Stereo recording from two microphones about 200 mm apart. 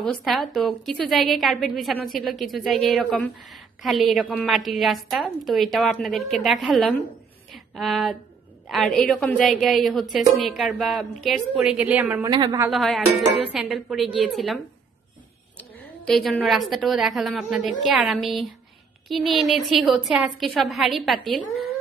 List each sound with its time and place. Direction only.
0.0 s a woman's voice: centre (ahead or behind)
7.5 s a sound: centre (ahead or behind)
8.6 s a woman's voice: centre (ahead or behind)
12.3 s a woman's voice: 20° right (ahead or behind)
12.5 s a woman's voice: 5° right (ahead or behind)
15.8 s a woman's voice: centre (ahead or behind)